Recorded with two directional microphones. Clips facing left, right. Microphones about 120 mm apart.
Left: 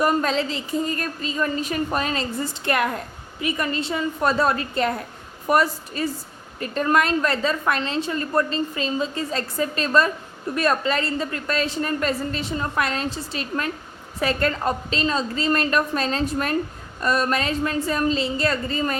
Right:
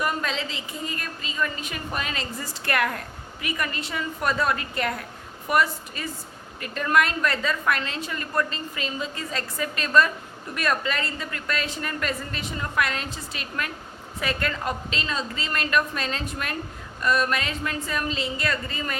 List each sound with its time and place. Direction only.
0.0 s a woman's voice: 40° left (ahead or behind)
2.4 s a woman's voice: 25° left (ahead or behind)